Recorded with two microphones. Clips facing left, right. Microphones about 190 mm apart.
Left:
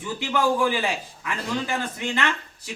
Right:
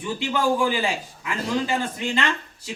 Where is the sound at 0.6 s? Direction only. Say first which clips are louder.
Even; 15° right (ahead or behind).